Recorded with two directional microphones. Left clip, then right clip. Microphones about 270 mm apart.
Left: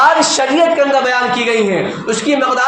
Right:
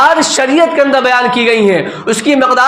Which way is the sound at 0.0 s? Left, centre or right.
Right.